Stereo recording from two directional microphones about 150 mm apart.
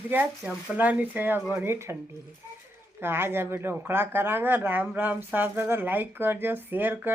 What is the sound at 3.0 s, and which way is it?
Speech, 15° right (ahead or behind).